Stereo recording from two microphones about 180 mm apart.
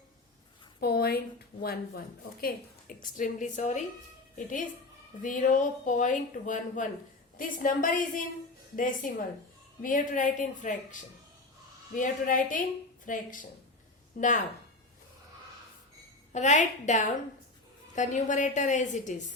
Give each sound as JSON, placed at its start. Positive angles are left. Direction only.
{"t": 0.8, "sound": "speech", "side_deg": 60}
{"t": 2.4, "sound": "speech", "side_deg": 55}
{"t": 16.3, "sound": "a woman's voice", "side_deg": 40}